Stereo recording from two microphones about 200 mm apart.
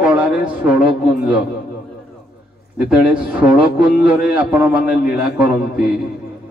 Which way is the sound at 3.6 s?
45° left (ahead or behind).